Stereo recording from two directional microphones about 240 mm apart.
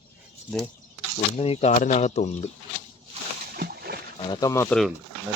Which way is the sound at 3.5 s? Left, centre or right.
Right.